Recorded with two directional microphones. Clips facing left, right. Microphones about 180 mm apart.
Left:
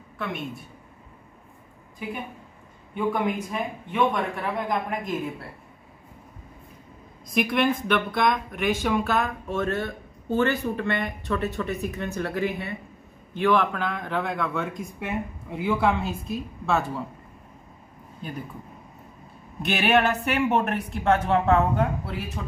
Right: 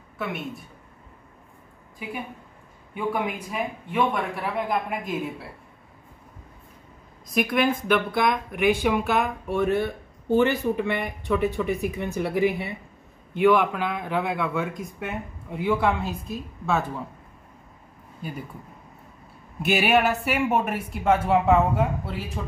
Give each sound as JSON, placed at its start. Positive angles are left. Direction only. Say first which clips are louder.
{"t": 0.2, "sound": "a man's voice", "louder": "right 1 dB", "side_deg": 0}
{"t": 2.9, "sound": "speech", "louder": "left 2 dB", "side_deg": -5}
{"t": 7.3, "sound": "a man's voice", "louder": "even", "side_deg": 0}
{"t": 18.2, "sound": "speech", "louder": "right 1 dB", "side_deg": -5}
{"t": 19.6, "sound": "a man's voice", "louder": "right 1 dB", "side_deg": -5}